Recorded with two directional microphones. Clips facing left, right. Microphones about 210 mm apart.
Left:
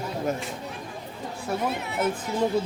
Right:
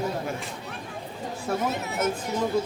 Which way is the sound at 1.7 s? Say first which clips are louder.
Even; 45° right (ahead or behind).